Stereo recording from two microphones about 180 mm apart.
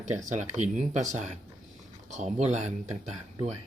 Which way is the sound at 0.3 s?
40° right (ahead or behind).